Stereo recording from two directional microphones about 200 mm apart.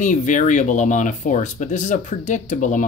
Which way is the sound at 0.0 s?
40° left (ahead or behind).